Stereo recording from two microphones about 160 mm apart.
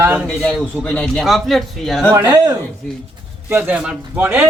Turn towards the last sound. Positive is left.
turn(degrees=-10)  # may be behind; listen again after turning